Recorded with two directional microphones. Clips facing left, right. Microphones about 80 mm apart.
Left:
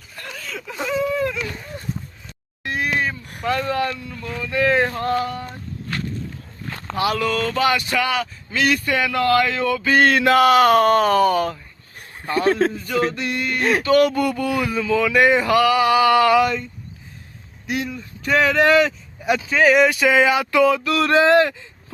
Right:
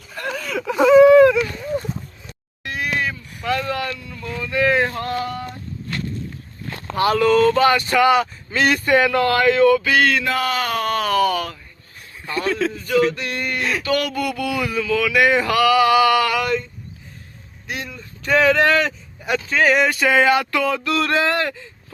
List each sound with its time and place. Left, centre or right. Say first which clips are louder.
0.2 s whimper: right 8 dB; right
2.6 s a sound: left 2 dB; left
3.5 s speech: left 1 dB; left
7.2 s speech: right 6 dB; centre
10.0 s speech: left 5 dB; left
11.9 s a sound: left 4 dB; left
12.7 s speech: right 3 dB; centre
13.6 s speech: left 6 dB; left
13.8 s speech: left 7 dB; left
16.4 s speech: left 2 dB; centre
17.7 s a man's voice: left 5 dB; centre
20.5 s speech: left 4 dB; centre